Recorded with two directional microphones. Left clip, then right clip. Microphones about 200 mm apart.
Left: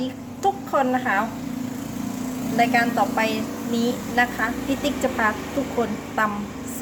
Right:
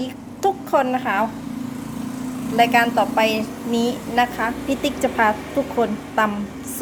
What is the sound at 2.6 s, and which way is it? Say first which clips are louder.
A woman's voice: right 4 dB; 30° right (ahead or behind).